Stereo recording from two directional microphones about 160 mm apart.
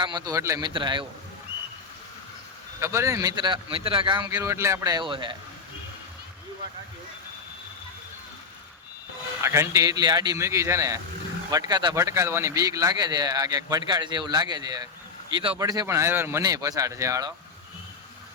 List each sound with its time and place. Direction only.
0.0 s speech: 25° right (ahead or behind)
0.7 s a man's voice: 30° right (ahead or behind)
2.8 s speech: 20° right (ahead or behind)
9.4 s speech: 15° right (ahead or behind)